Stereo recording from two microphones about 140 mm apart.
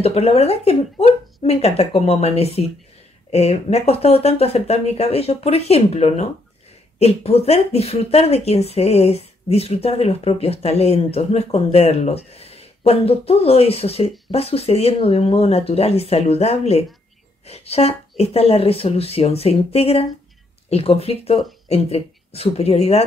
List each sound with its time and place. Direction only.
0.0 s speech: 45° left (ahead or behind)